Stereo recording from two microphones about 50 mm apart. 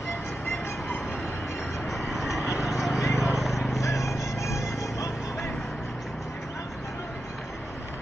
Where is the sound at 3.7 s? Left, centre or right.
Left.